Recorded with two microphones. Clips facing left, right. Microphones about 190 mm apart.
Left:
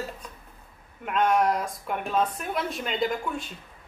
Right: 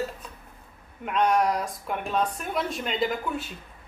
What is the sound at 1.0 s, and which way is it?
Speech, centre (ahead or behind).